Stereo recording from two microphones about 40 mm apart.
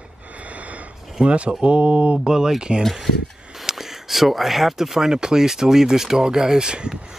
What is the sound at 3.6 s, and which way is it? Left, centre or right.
Speech, centre.